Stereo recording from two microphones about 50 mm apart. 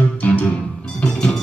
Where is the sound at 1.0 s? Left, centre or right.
Centre.